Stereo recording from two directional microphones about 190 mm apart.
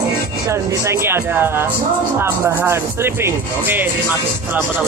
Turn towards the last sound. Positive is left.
turn(degrees=-10)  # may be behind; listen again after turning